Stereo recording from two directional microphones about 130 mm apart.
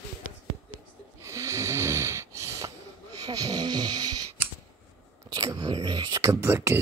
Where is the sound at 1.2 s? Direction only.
20° right (ahead or behind).